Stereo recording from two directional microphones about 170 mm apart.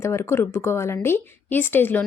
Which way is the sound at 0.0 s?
15° left (ahead or behind).